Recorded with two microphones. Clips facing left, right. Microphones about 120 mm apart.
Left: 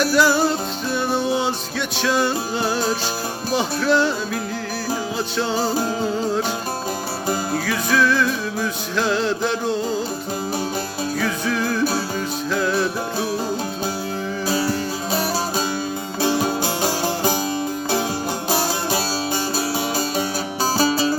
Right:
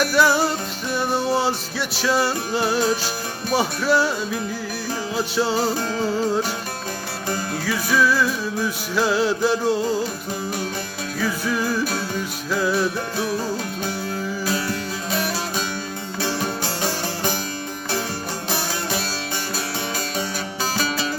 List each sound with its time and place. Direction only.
0.0 s music: centre (ahead or behind)
5.1 s music: 5° right (ahead or behind)
7.7 s music: 5° right (ahead or behind)
11.2 s music: 5° right (ahead or behind)
14.4 s music: 30° left (ahead or behind)
16.2 s music: 15° left (ahead or behind)
20.7 s music: 35° left (ahead or behind)